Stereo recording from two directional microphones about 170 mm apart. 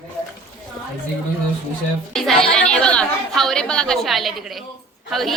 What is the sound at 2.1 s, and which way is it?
A woman's voice, centre (ahead or behind).